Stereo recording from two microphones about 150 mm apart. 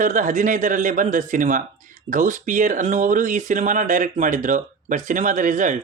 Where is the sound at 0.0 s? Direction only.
60° right (ahead or behind).